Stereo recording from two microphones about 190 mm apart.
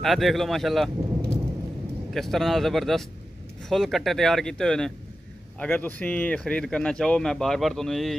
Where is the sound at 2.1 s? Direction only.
Centre (ahead or behind).